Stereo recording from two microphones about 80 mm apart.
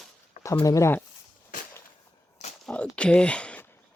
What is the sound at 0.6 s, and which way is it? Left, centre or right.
Speech, left.